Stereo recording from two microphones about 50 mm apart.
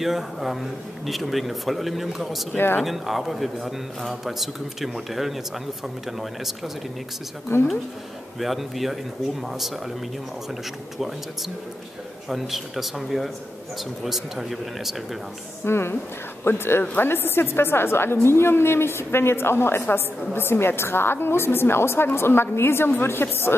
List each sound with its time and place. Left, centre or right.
0.0 s a man's voice: centre
2.5 s a woman's voice: left
2.8 s a man's voice: centre
7.5 s a woman's voice: left
8.4 s a man's voice: centre
12.3 s a man's voice: centre
15.6 s a woman's voice: left